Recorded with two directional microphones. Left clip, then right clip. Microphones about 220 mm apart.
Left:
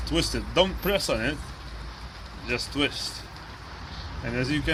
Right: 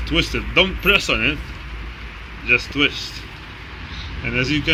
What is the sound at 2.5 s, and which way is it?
Speech, 15° left (ahead or behind).